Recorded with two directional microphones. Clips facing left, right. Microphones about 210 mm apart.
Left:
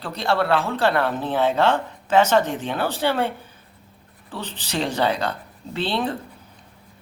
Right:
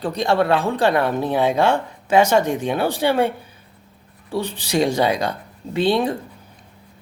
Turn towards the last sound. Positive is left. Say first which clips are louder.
# right 6 dB
turn(degrees=-15)  # may be behind; listen again after turning